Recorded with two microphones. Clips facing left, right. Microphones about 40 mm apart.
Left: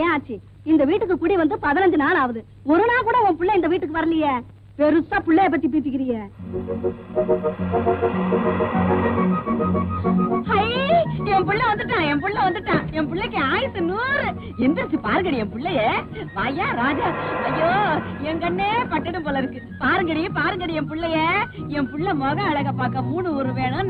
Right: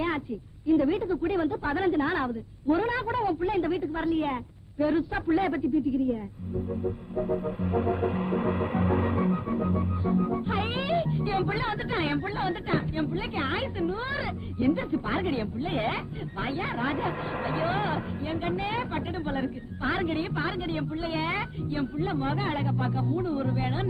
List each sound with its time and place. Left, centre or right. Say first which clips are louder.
0.7 s a woman's voice: left 7 dB; left
6.7 s music: left 9 dB; left